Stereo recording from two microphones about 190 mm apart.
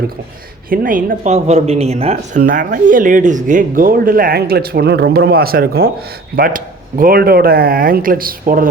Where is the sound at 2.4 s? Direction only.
45° right (ahead or behind).